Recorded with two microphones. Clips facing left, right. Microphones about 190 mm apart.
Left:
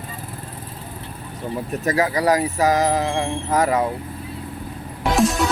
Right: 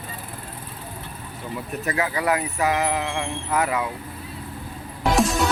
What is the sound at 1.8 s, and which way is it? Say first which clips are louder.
Speech: left 5 dB; 40° left (ahead or behind).